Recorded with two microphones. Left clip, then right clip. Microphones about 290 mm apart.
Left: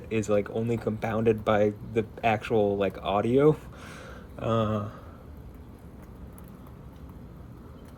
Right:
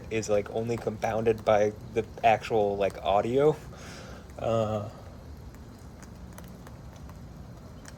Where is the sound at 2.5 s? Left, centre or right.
Left.